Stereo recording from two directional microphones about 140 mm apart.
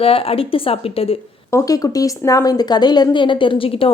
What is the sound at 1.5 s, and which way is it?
Speech, 25° left (ahead or behind).